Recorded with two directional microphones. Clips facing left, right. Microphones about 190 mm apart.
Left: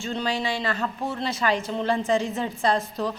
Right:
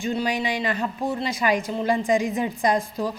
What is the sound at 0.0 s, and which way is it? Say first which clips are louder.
A woman's voice: right 2 dB; 15° right (ahead or behind).